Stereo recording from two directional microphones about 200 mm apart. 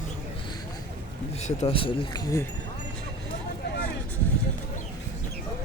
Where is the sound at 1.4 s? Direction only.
30° left (ahead or behind).